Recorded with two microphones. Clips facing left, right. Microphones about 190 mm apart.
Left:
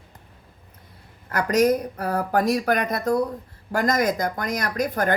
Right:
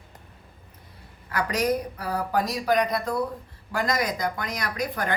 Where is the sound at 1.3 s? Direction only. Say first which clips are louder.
Left 6 dB; 45° left (ahead or behind).